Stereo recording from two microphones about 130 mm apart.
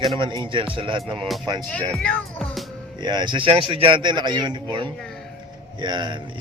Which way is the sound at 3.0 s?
35° right (ahead or behind).